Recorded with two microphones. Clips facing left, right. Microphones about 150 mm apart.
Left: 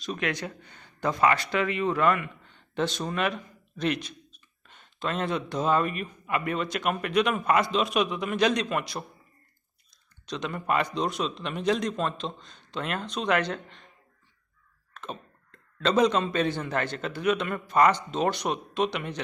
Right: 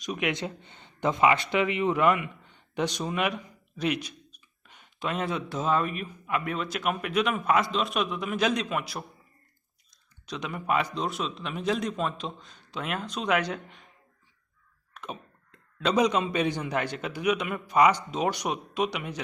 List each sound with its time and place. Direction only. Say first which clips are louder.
0.0 s speech: right 1 dB; 15° right (ahead or behind)
10.2 s speech: left 1 dB; 10° right (ahead or behind)
14.9 s speech: left 1 dB; 10° right (ahead or behind)